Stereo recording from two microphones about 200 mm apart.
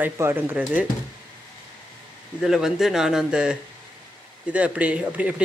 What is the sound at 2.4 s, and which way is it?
Speech, centre (ahead or behind).